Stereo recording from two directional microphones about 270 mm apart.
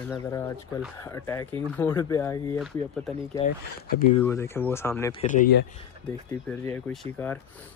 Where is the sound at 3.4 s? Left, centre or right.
Centre.